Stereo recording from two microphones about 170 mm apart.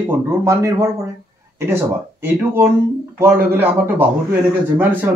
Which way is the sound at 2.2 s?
15° right (ahead or behind).